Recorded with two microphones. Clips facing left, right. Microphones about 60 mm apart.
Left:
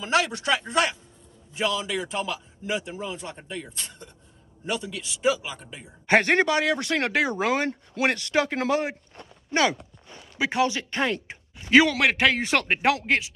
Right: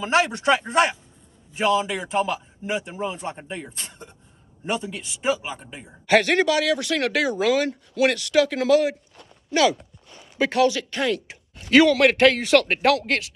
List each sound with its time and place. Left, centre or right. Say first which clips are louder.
0.0 s a man's voice: right 4 dB; right
2.0 s a man's voice: right 6 dB; centre; by 5.6 s right
6.0 s speech: right 2 dB; left
9.1 s walk: right 2 dB; left
10.5 s speech: right 4 dB; left
11.6 s speech: right 3 dB; centre
12.4 s speech: right 5 dB; left